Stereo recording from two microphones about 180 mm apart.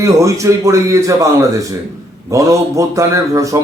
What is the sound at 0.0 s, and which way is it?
A man's voice, 15° right (ahead or behind).